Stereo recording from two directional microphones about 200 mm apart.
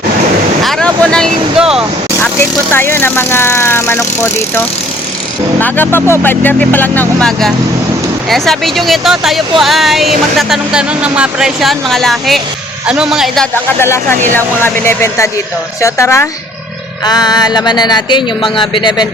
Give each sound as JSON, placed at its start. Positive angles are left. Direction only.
{"t": 0.6, "sound": "speech", "side_deg": 5}
{"t": 2.1, "sound": "speech", "side_deg": 10}